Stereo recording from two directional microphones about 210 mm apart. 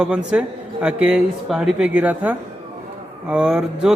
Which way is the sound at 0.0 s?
5° right (ahead or behind).